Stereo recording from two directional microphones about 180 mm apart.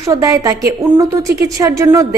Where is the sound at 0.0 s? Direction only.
15° right (ahead or behind).